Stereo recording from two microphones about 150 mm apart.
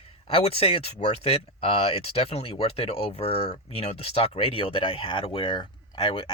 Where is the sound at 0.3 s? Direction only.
40° left (ahead or behind).